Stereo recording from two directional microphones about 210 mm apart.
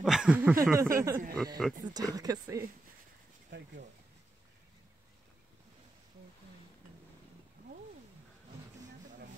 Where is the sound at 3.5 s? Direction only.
55° right (ahead or behind).